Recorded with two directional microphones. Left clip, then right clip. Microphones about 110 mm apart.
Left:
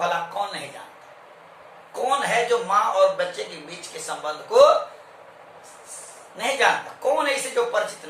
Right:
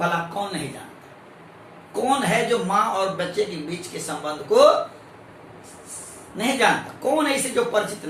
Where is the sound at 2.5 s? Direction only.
15° left (ahead or behind).